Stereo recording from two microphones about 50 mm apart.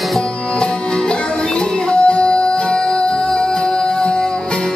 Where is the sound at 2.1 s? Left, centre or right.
Left.